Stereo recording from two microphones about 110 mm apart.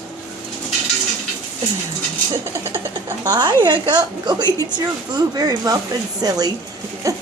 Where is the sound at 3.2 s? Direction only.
40° right (ahead or behind).